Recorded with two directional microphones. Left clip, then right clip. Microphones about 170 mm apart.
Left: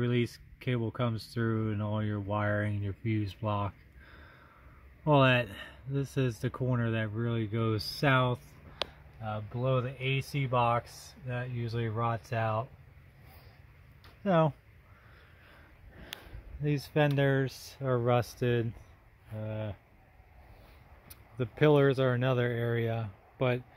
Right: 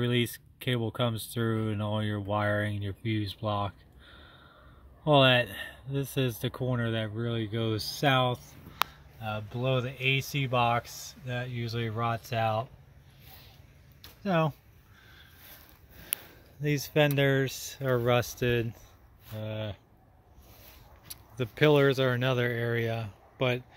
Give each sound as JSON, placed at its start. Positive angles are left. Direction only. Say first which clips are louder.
{"t": 0.0, "sound": "speech", "louder": "right 3 dB", "side_deg": -10}
{"t": 5.0, "sound": "speech", "louder": "right 3 dB", "side_deg": 0}
{"t": 9.2, "sound": "speech", "louder": "right 2 dB", "side_deg": 0}
{"t": 14.2, "sound": "speech", "louder": "left 1 dB", "side_deg": 15}
{"t": 16.6, "sound": "speech", "louder": "right 3 dB", "side_deg": 0}
{"t": 21.4, "sound": "speech", "louder": "right 2 dB", "side_deg": 0}